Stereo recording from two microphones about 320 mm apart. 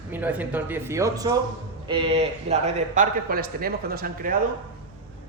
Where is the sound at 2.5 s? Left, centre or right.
Right.